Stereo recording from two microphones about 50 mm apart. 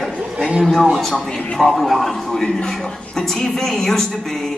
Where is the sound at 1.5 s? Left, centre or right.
Centre.